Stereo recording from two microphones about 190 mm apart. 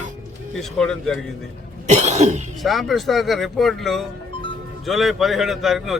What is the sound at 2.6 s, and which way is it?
Speech, centre (ahead or behind).